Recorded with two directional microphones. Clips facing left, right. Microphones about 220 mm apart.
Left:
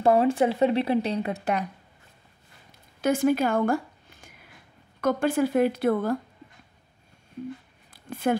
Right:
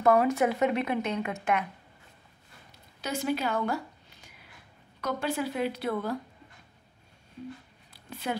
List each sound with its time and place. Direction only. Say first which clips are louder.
0.0 s speech: left 3 dB; 30° left (ahead or behind)
3.0 s speech: left 8 dB; 50° left (ahead or behind)
7.9 s a sound: left 9 dB; 50° left (ahead or behind)